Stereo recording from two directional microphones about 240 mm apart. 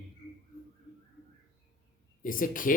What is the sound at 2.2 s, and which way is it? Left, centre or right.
Speech, left.